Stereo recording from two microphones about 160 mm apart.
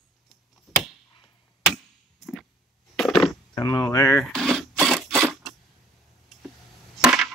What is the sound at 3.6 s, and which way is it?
Speech, 20° left (ahead or behind).